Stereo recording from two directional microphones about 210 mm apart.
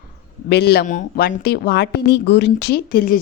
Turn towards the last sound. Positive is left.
turn(degrees=45)  # may be behind; listen again after turning